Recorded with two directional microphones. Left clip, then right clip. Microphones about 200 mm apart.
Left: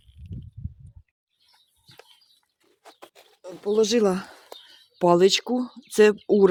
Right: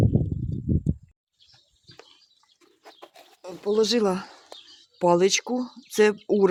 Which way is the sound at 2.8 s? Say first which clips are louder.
Even; 25° left (ahead or behind).